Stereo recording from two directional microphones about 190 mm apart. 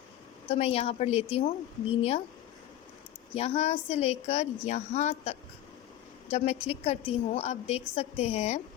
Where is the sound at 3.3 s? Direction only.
35° left (ahead or behind).